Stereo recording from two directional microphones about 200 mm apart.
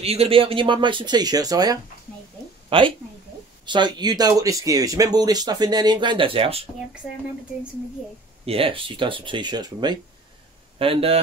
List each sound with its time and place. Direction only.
0.0 s speech: 30° right (ahead or behind)
8.5 s speech: 25° right (ahead or behind)